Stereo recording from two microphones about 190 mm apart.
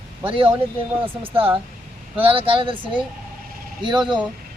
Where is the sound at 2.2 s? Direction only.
30° right (ahead or behind).